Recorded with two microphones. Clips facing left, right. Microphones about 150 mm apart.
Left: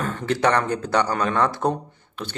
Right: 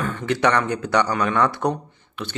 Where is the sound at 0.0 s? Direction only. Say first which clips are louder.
Right 1 dB; 35° left (ahead or behind).